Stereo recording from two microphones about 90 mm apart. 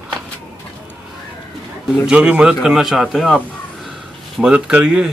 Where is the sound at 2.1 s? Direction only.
10° right (ahead or behind).